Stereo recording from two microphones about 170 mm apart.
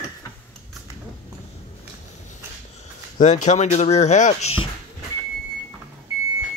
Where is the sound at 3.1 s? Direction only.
45° left (ahead or behind).